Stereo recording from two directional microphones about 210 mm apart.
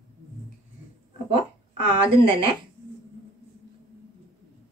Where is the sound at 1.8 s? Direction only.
25° right (ahead or behind).